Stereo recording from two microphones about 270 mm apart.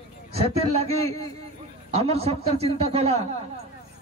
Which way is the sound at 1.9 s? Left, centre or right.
Right.